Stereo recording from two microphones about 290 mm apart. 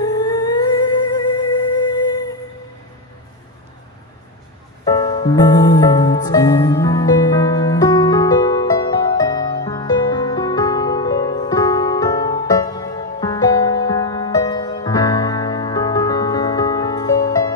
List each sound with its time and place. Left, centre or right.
0.0 s music: centre
4.8 s music: centre